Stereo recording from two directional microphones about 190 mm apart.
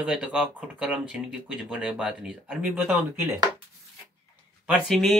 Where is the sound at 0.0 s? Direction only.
5° right (ahead or behind).